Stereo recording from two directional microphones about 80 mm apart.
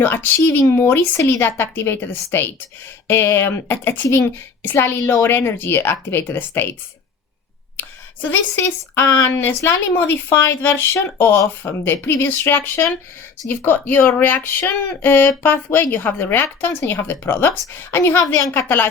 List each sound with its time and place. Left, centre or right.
0.0 s speech: left
0.3 s speech: left
8.3 s speech: left